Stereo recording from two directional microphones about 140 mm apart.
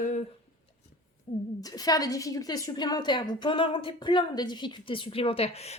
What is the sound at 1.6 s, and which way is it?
A woman's voice, 25° left (ahead or behind).